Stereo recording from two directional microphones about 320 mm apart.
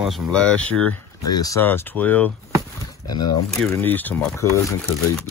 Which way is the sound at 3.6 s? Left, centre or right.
Centre.